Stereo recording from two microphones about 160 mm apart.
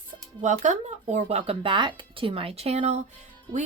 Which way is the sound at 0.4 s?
45° right (ahead or behind).